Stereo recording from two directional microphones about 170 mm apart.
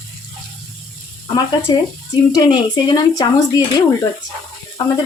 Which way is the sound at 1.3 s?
25° left (ahead or behind).